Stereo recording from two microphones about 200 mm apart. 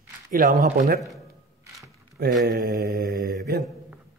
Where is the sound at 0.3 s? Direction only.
45° right (ahead or behind).